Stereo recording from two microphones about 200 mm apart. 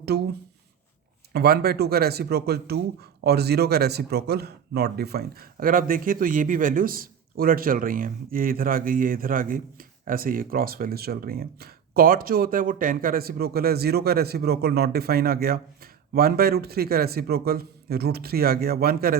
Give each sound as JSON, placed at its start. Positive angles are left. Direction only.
{"t": 0.1, "sound": "speech", "side_deg": -55}
{"t": 1.3, "sound": "speech", "side_deg": -55}